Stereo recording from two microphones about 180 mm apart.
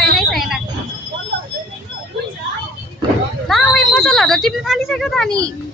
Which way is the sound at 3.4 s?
Centre (ahead or behind).